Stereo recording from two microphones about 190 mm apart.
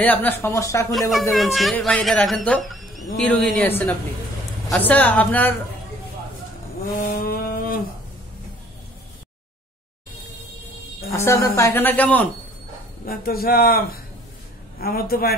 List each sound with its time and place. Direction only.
0.0 s a woman's voice: 10° left (ahead or behind)
1.3 s a woman's voice: centre (ahead or behind)
7.0 s a sound: 50° left (ahead or behind)
11.1 s a woman's voice: 15° left (ahead or behind)
13.0 s a man's voice: 50° left (ahead or behind)